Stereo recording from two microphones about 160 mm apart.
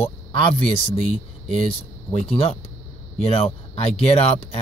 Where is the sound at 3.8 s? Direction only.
40° left (ahead or behind).